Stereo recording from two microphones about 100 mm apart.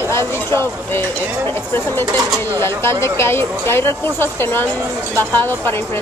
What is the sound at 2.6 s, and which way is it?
Speech, 25° left (ahead or behind).